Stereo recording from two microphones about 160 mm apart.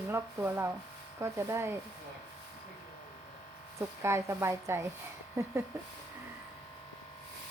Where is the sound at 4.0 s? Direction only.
15° right (ahead or behind).